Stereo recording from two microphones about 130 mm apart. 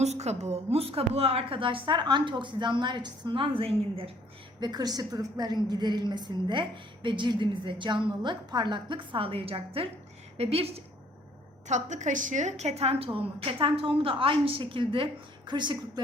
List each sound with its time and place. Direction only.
0.0 s a woman's voice: 60° right (ahead or behind)
4.6 s a woman's voice: 30° right (ahead or behind); by 10.8 s 50° right (ahead or behind)
11.7 s a woman's voice: 65° right (ahead or behind); by 15.8 s 35° right (ahead or behind)